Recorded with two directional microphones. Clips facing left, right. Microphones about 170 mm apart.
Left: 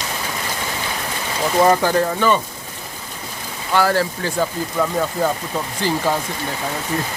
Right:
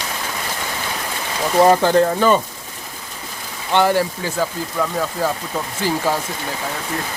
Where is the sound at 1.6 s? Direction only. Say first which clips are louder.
Right 3 dB; 25° right (ahead or behind).